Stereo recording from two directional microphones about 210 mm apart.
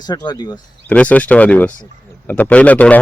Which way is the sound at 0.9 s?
5° left (ahead or behind).